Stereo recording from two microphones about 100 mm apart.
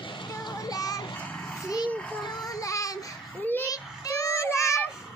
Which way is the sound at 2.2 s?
35° left (ahead or behind).